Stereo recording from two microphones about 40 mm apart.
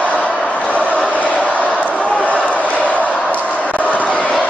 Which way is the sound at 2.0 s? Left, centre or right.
Left.